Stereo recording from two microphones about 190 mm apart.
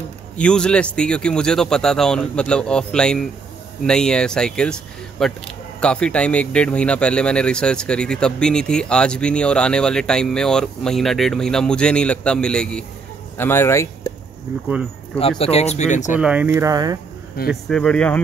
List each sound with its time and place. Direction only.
0.4 s speech: 5° left (ahead or behind)
15.1 s speech: 30° left (ahead or behind)
16.2 s speech: 5° right (ahead or behind)
17.5 s speech: 5° left (ahead or behind)